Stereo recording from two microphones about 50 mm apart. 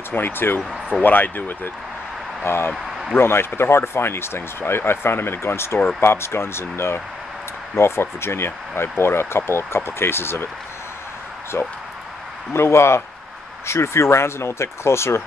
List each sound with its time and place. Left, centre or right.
0.1 s speech: left
2.4 s speech: left
2.7 s a sound: centre
3.2 s speech: left
11.5 s speech: left